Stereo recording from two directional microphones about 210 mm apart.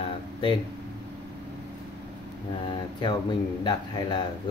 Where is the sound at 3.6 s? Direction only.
20° left (ahead or behind).